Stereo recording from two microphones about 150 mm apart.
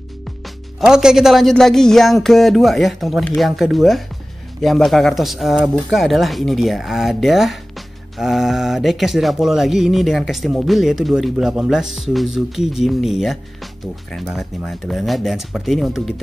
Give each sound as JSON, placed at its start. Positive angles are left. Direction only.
{"t": 0.7, "sound": "speech", "side_deg": -5}